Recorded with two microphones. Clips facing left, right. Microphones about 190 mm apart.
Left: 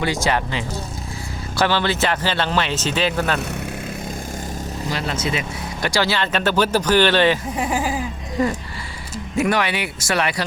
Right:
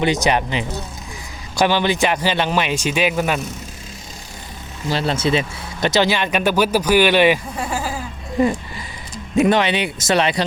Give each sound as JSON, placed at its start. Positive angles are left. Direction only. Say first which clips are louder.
{"t": 0.0, "sound": "speech", "louder": "right 3 dB", "side_deg": -20}
{"t": 4.9, "sound": "speech", "louder": "right 6 dB", "side_deg": -30}
{"t": 7.5, "sound": "a sound", "louder": "left 3 dB", "side_deg": 15}
{"t": 8.4, "sound": "speech", "louder": "right 3 dB", "side_deg": -15}